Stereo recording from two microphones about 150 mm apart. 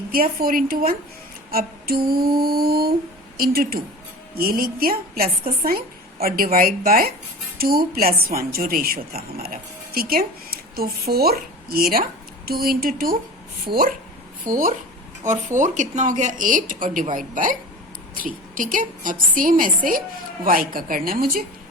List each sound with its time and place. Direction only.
0.1 s a woman's voice: 80° right
1.5 s a sound: 80° right
2.0 s music: 90° right
3.3 s a woman's voice: 80° right
7.6 s a woman's voice: 85° right
13.7 s speech: 35° right (ahead or behind)
14.4 s a woman's voice: 60° right (ahead or behind); by 21.4 s 75° right (ahead or behind)